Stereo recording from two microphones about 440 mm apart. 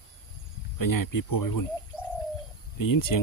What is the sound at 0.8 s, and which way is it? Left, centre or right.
Speech, left.